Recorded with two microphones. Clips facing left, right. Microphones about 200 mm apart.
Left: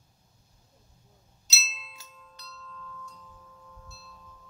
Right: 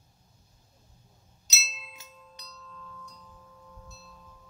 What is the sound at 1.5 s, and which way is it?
Music, 15° right (ahead or behind).